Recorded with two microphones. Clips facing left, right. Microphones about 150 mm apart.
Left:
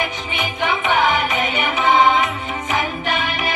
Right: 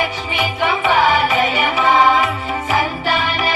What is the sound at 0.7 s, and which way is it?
Music, 40° right (ahead or behind).